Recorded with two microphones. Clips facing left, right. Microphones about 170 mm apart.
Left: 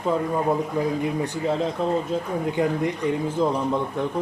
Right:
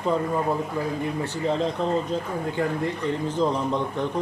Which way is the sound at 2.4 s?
15° left (ahead or behind).